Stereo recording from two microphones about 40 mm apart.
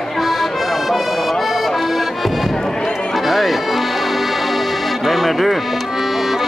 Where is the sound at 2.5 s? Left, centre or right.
Centre.